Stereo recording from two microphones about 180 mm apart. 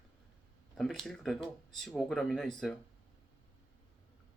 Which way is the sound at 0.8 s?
5° left (ahead or behind).